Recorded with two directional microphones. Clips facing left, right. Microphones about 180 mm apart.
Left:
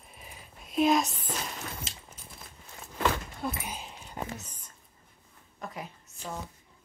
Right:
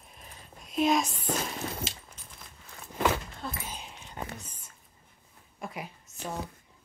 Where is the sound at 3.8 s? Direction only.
Centre (ahead or behind).